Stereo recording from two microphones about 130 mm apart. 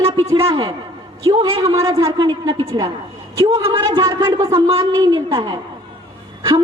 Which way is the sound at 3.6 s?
45° right (ahead or behind).